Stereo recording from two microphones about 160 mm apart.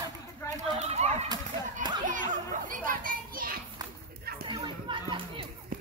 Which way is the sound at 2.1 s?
55° right (ahead or behind).